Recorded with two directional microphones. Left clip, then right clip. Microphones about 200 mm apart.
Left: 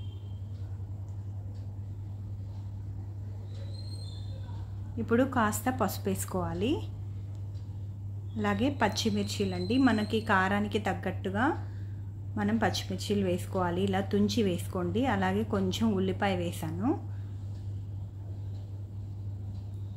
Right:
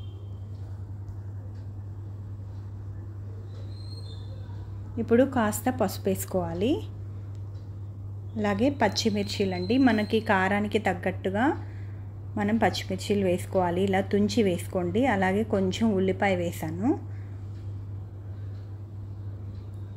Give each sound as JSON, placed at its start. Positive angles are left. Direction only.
{"t": 4.9, "sound": "a woman's voice", "side_deg": -10}
{"t": 8.4, "sound": "a woman's voice", "side_deg": -10}